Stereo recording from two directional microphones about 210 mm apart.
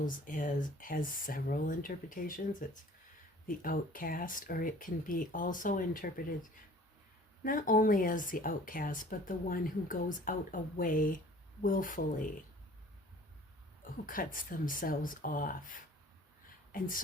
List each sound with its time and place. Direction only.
0.0 s speech: 40° left (ahead or behind)
7.4 s speech: 40° left (ahead or behind)
13.8 s speech: 40° left (ahead or behind)